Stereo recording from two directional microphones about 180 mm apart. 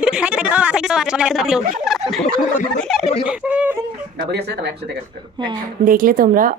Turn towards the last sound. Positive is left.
turn(degrees=-50)  # may be behind; listen again after turning